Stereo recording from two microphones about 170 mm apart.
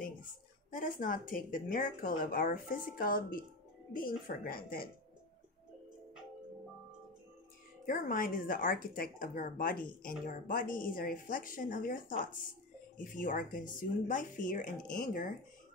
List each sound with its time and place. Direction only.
0.7 s speech: 55° left (ahead or behind)
7.8 s speech: 55° left (ahead or behind)